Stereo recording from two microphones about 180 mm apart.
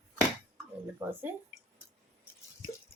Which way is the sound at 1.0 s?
10° right (ahead or behind).